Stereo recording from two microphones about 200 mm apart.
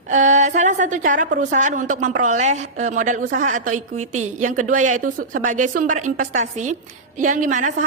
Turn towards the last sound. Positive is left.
turn(degrees=-40)  # may be behind; listen again after turning